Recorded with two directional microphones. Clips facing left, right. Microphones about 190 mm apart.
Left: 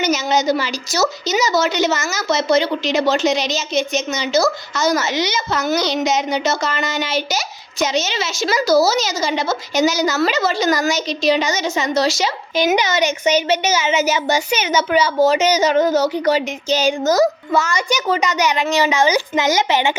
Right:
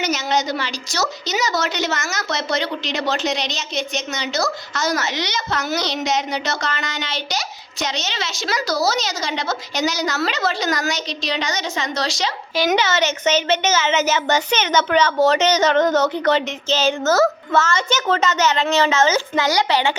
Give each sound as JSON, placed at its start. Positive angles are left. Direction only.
{"t": 0.0, "sound": "a woman's voice", "side_deg": 0}